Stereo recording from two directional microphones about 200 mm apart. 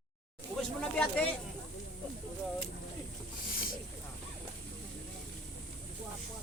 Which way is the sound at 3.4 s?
45° left (ahead or behind).